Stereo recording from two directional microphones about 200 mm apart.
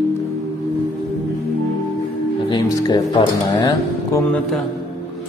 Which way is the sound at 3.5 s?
15° left (ahead or behind).